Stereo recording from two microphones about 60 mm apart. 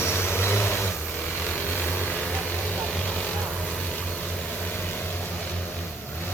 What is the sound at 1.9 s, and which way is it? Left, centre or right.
Vehicle, left.